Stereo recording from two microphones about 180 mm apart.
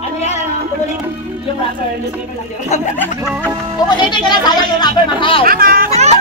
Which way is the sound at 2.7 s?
40° left (ahead or behind).